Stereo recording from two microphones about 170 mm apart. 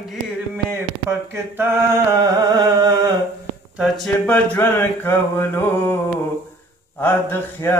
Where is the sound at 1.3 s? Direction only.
15° right (ahead or behind).